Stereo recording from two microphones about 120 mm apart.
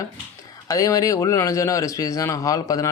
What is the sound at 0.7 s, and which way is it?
A man's voice, 30° left (ahead or behind).